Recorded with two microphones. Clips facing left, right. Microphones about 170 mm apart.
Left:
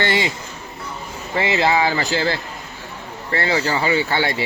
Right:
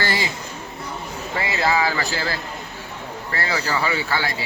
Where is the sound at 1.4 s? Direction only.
25° left (ahead or behind).